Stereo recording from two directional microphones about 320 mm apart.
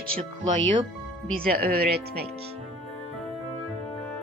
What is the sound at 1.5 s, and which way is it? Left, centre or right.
Speech, right.